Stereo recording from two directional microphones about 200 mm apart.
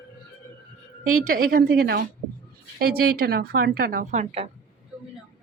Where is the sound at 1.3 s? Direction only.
45° right (ahead or behind).